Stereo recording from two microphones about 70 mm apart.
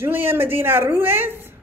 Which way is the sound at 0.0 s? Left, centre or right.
Right.